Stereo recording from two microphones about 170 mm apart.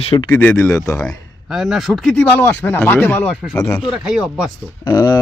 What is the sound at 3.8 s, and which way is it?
Speech, centre (ahead or behind).